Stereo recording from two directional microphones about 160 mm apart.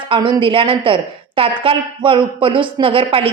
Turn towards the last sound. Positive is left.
turn(degrees=-35)  # may be behind; listen again after turning